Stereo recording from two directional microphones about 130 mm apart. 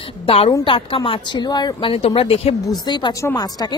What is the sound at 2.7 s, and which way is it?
Speech, 35° left (ahead or behind).